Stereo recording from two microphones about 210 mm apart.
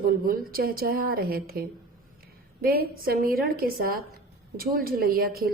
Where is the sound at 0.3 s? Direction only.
45° right (ahead or behind).